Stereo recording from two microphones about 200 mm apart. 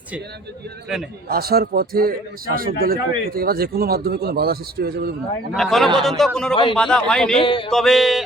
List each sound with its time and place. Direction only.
1.3 s speech: 50° right (ahead or behind)
5.5 s a man's voice: centre (ahead or behind)
7.4 s a sound: 25° left (ahead or behind)
7.7 s a man's voice: centre (ahead or behind)